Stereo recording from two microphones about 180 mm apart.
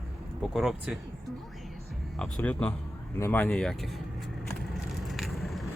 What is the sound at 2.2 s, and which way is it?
Speech, 5° left (ahead or behind).